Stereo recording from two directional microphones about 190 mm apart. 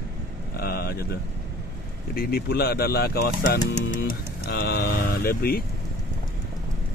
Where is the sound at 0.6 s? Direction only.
55° left (ahead or behind).